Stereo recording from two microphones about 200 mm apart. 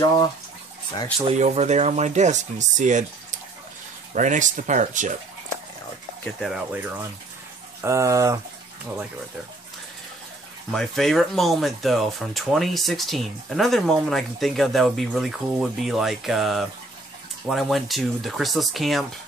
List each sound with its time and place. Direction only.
1.2 s speech: 35° right (ahead or behind)
6.2 s speech: centre (ahead or behind)
10.7 s speech: centre (ahead or behind)